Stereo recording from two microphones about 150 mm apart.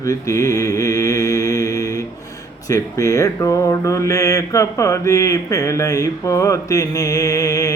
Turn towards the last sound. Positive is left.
turn(degrees=20)  # may be behind; listen again after turning